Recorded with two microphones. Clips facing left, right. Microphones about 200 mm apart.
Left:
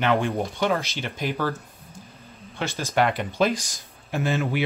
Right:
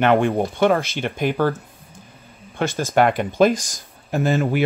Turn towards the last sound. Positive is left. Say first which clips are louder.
# right 5 dB
turn(degrees=-45)  # may be behind; listen again after turning